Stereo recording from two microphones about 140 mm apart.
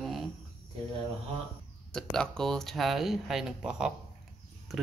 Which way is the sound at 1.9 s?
5° left (ahead or behind).